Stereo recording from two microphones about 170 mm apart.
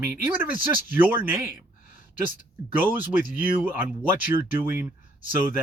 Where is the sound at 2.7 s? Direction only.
10° right (ahead or behind).